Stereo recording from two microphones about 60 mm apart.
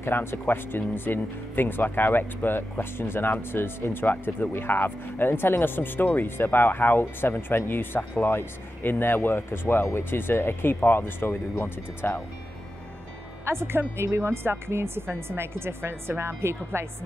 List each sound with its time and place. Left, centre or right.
0.0 s speech: left
13.5 s a woman's voice: right